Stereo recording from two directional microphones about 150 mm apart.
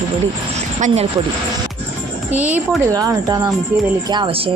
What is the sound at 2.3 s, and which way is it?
Speech, 10° right (ahead or behind).